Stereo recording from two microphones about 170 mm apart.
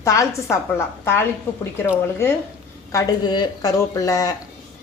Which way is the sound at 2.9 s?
20° left (ahead or behind).